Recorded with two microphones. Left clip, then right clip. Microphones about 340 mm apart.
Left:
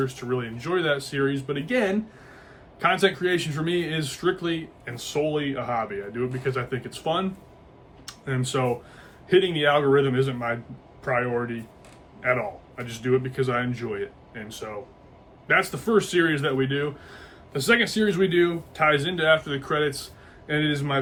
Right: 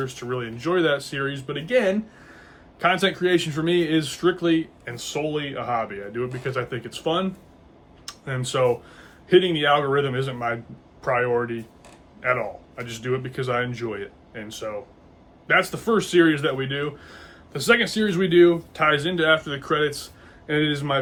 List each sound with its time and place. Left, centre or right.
0.0 s speech: centre